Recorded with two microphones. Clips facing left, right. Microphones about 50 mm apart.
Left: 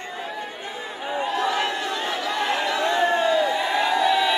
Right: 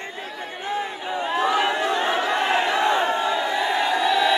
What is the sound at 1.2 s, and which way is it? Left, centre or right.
Crowd, right.